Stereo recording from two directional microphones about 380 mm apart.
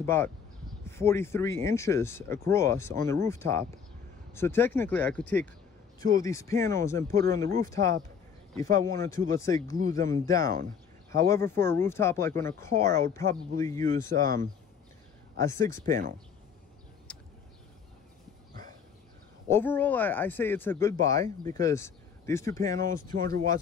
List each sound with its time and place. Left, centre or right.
0.0 s speech: centre
13.8 s speech: right
15.3 s speech: centre
15.8 s speech: centre
17.1 s a sound: centre
19.5 s speech: centre
23.1 s speech: right